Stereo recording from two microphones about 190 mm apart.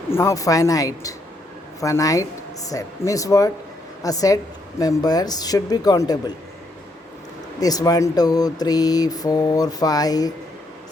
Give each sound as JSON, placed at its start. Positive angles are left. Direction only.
{"t": 0.1, "sound": "speech", "side_deg": 15}
{"t": 7.6, "sound": "speech", "side_deg": 20}